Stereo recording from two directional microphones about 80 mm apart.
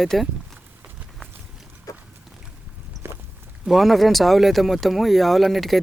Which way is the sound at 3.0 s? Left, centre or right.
Right.